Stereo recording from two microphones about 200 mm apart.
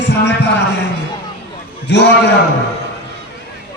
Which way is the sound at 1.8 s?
60° left (ahead or behind).